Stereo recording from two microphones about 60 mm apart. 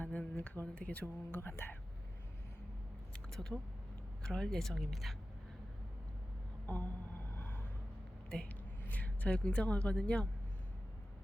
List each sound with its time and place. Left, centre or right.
0.0 s speech: left
1.4 s speech: left
3.1 s a sound: centre
4.2 s speech: centre
6.7 s speech: left
7.3 s vehicle: left
8.4 s a woman's voice: left